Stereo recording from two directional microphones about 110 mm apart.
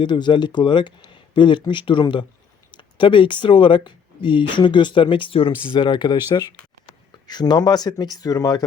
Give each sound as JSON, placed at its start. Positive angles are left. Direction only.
{"t": 0.0, "sound": "speech", "side_deg": 45}